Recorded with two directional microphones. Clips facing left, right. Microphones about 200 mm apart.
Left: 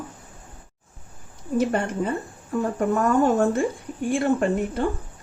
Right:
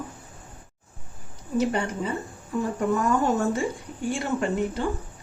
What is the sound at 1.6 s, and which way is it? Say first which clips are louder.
Speech: left 2 dB; 50° left (ahead or behind).